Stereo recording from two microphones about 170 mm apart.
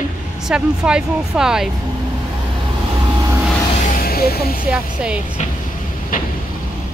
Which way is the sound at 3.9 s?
60° left (ahead or behind).